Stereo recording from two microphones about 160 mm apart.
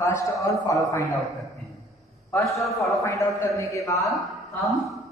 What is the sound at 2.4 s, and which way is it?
Speech, centre (ahead or behind).